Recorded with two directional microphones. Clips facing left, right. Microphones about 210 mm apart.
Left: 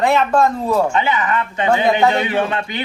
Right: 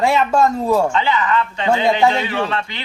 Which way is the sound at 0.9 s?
20° left (ahead or behind).